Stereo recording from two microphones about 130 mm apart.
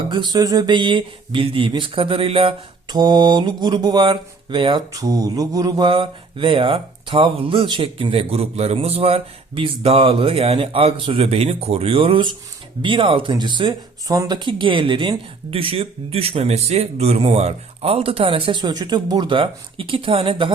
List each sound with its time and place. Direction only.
0.1 s speech: 35° right (ahead or behind)
2.9 s speech: 35° right (ahead or behind)
4.9 s mantra: 25° right (ahead or behind); by 12.3 s 45° right (ahead or behind)
12.8 s speech: 40° right (ahead or behind)
14.2 s mantra: 35° right (ahead or behind)